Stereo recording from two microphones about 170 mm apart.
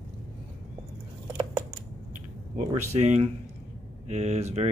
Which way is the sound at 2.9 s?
40° right (ahead or behind).